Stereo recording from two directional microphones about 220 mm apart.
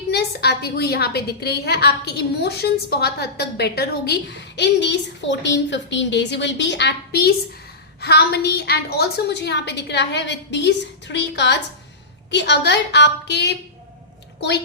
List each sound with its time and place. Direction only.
0.1 s a woman's voice: 45° left (ahead or behind)